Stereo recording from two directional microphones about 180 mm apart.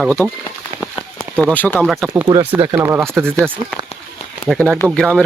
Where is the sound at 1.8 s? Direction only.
5° right (ahead or behind).